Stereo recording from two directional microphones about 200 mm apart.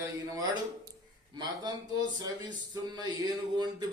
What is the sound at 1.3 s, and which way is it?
A man's voice, 20° right (ahead or behind).